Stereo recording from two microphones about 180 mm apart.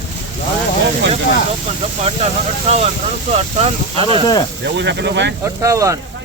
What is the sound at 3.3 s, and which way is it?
Speech, 35° right (ahead or behind).